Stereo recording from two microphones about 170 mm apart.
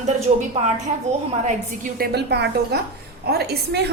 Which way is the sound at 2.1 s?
75° right (ahead or behind).